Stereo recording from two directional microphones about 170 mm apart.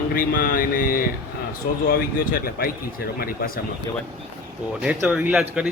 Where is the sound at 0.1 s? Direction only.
60° left (ahead or behind).